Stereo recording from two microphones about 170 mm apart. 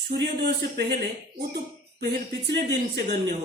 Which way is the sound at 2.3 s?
90° right.